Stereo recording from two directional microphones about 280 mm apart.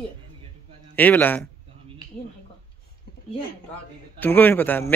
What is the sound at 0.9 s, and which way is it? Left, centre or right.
Speech, centre.